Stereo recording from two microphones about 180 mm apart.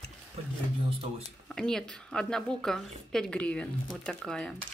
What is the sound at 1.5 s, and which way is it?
A woman's voice, 5° left (ahead or behind).